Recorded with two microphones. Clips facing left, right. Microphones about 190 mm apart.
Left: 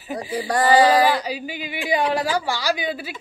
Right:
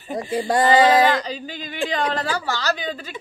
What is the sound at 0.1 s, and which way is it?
Female singing, 20° right (ahead or behind).